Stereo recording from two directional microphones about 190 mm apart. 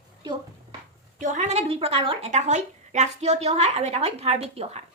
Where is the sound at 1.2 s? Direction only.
40° right (ahead or behind).